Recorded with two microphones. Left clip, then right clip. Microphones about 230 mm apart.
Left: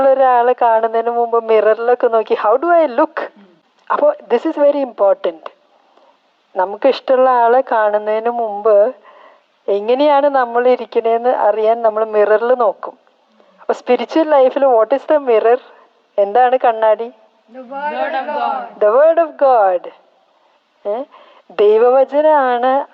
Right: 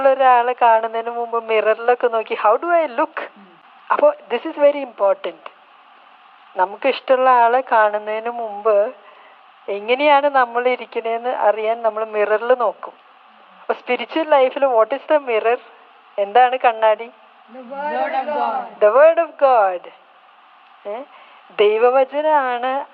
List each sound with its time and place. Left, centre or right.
0.0 s a woman's voice: left
6.6 s a woman's voice: left
17.7 s a man's voice: right
18.8 s a woman's voice: left
21.5 s a woman's voice: left